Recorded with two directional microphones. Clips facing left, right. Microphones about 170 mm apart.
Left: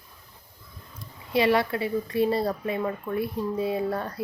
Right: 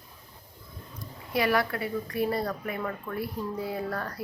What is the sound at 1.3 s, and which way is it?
A woman's voice, 25° left (ahead or behind).